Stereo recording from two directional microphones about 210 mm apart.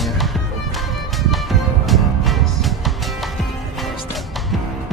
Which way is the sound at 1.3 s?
Centre (ahead or behind).